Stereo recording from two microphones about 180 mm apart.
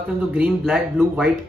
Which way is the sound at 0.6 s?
Centre (ahead or behind).